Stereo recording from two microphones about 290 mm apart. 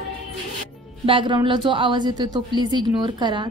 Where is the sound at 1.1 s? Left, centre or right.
Centre.